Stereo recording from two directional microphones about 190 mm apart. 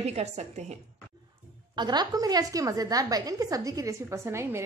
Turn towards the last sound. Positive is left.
turn(degrees=-15)  # may be behind; listen again after turning